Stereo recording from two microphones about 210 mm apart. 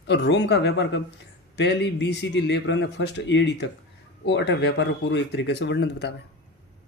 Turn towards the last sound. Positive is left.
turn(degrees=55)  # may be behind; listen again after turning